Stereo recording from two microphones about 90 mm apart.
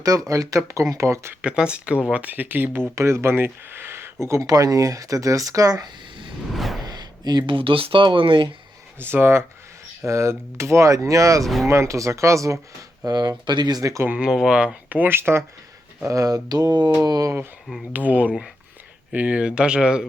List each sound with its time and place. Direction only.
0.0 s speech: 40° right (ahead or behind)
1.4 s speech: 10° right (ahead or behind); by 4.1 s 25° right (ahead or behind)
4.3 s speech: 40° right (ahead or behind)
6.5 s whoosh: centre (ahead or behind)
6.8 s speech: 50° right (ahead or behind); by 8.4 s 70° right (ahead or behind)
9.0 s speech: 25° right (ahead or behind)
11.4 s speech: centre (ahead or behind)
11.7 s speech: 35° right (ahead or behind)
13.1 s speech: 50° right (ahead or behind)
14.0 s speech: 20° right (ahead or behind)
14.3 s speech: 5° right (ahead or behind); by 15.4 s 25° right (ahead or behind)
16.0 s speech: 40° right (ahead or behind)
17.9 s speech: 20° right (ahead or behind)